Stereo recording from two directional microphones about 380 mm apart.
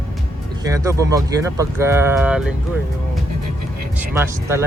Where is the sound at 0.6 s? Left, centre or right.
Centre.